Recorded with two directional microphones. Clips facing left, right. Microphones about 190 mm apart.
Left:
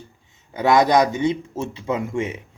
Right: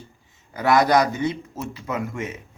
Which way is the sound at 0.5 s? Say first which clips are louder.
Left 2 dB; 20° left (ahead or behind).